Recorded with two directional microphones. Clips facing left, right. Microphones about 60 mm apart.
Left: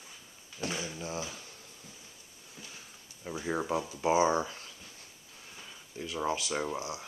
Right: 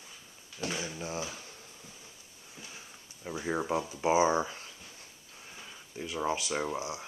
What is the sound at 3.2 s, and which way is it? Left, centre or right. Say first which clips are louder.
Speech: right 1 dB; centre.